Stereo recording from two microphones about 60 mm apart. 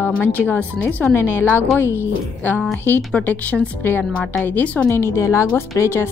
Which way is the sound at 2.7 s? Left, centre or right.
Left.